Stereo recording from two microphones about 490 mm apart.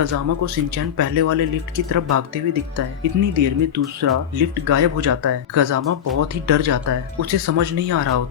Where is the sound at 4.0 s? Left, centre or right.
Right.